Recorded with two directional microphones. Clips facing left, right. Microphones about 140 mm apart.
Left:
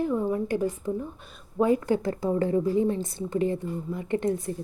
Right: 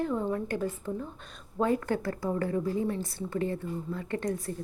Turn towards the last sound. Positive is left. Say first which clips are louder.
# left 5 dB
turn(degrees=20)  # may be behind; listen again after turning